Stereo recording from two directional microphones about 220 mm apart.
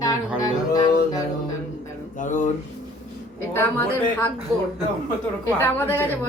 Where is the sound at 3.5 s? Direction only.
10° left (ahead or behind).